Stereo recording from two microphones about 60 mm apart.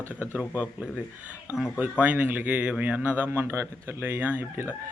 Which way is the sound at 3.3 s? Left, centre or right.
Right.